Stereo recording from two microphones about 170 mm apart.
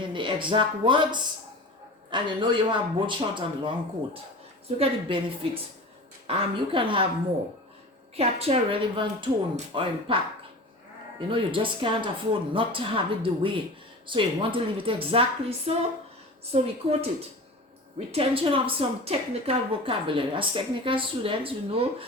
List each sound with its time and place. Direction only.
0.0 s a woman's voice: 30° right (ahead or behind)
8.1 s a woman's voice: 35° right (ahead or behind)
11.3 s a woman's voice: 30° right (ahead or behind)